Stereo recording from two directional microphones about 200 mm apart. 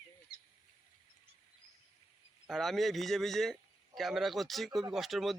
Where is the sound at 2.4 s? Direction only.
Centre (ahead or behind).